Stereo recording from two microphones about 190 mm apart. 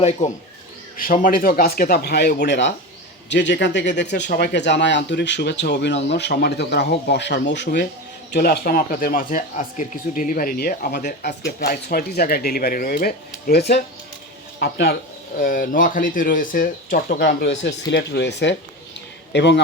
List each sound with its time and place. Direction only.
0.0 s speech: 35° left (ahead or behind)
0.9 s a man's voice: 45° left (ahead or behind)
15.4 s a man's voice: 45° left (ahead or behind); by 19.6 s 65° left (ahead or behind)